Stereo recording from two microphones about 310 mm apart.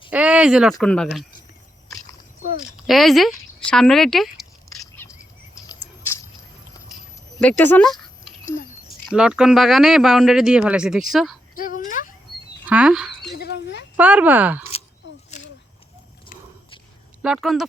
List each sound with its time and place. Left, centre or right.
0.1 s speech: centre
2.8 s speech: centre
4.8 s chirp: centre
7.3 s speech: centre
11.5 s whimper: left
12.6 s a sound: centre
13.3 s a sound: left
13.9 s speech: centre
15.0 s a sound: left
17.2 s speech: centre